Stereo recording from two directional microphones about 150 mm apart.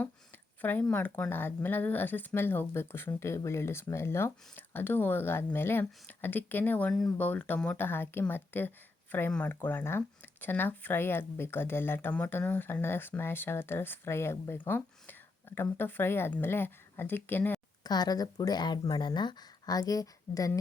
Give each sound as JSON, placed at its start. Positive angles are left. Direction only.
{"t": 0.6, "sound": "speech", "side_deg": 10}
{"t": 17.8, "sound": "speech", "side_deg": 25}